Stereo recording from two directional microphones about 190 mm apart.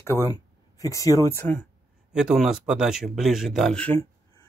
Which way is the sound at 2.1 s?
5° right (ahead or behind).